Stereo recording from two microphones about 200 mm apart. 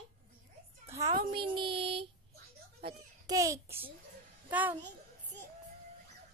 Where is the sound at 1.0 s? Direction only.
25° right (ahead or behind).